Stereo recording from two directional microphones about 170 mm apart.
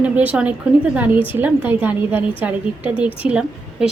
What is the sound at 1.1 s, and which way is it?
Speech, 30° left (ahead or behind).